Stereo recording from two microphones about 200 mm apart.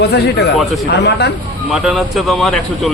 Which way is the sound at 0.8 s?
55° left (ahead or behind).